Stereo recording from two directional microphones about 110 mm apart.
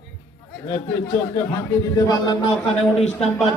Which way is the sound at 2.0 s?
35° left (ahead or behind).